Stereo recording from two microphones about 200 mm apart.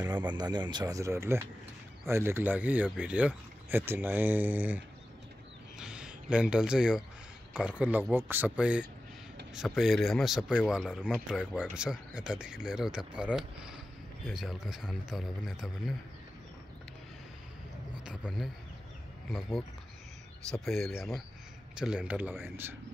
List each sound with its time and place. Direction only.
0.3 s speech: 20° right (ahead or behind); by 16.0 s centre (ahead or behind)
18.0 s speech: 5° right (ahead or behind)